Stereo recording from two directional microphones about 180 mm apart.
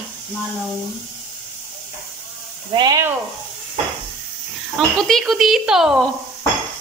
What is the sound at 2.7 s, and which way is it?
Speech, 25° right (ahead or behind).